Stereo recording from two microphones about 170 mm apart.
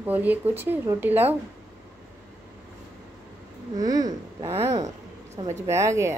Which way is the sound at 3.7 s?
20° right (ahead or behind).